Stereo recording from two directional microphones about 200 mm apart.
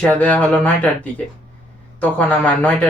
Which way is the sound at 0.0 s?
5° left (ahead or behind).